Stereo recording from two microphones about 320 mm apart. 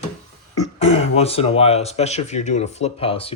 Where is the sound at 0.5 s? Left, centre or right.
Centre.